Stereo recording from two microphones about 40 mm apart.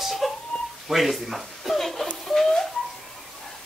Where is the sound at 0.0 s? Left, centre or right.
Centre.